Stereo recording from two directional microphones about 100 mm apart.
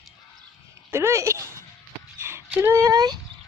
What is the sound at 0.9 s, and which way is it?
Speech, 25° right (ahead or behind).